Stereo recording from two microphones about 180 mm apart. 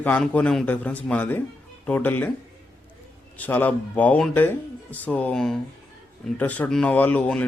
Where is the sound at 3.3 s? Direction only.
10° left (ahead or behind).